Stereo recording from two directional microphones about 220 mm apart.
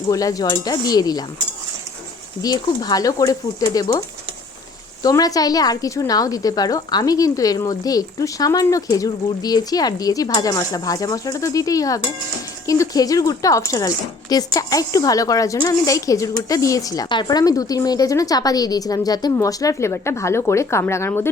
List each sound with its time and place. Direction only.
0.1 s speech: 15° left (ahead or behind)
2.4 s speech: 15° left (ahead or behind)
5.0 s speech: 15° left (ahead or behind)